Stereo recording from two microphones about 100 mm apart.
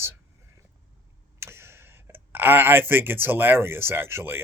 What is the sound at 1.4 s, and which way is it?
Speech, 25° right (ahead or behind).